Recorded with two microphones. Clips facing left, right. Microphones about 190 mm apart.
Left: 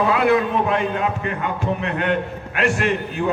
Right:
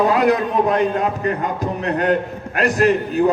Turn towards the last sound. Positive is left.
turn(degrees=-40)  # may be behind; listen again after turning